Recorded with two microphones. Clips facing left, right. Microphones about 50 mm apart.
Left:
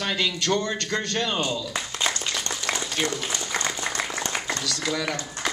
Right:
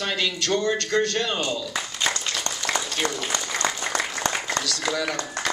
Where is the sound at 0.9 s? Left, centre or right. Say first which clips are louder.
Right 4 dB; left.